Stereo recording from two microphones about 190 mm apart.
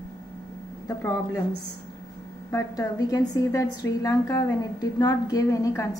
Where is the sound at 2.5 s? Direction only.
20° left (ahead or behind).